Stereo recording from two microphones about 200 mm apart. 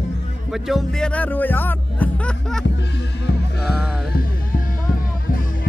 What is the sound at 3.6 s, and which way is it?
Music, 5° right (ahead or behind).